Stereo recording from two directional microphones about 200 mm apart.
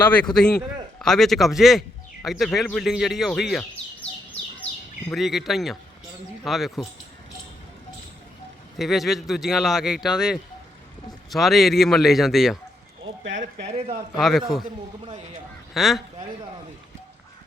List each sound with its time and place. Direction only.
0.0 s a man's voice: 10° left (ahead or behind)
5.1 s speech: centre (ahead or behind)
8.8 s speech: centre (ahead or behind)
13.7 s speech: 30° right (ahead or behind)
14.2 s speech: centre (ahead or behind)
15.7 s speech: centre (ahead or behind)